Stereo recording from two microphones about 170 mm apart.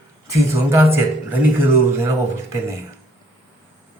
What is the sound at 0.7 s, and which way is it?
Speech, 15° right (ahead or behind).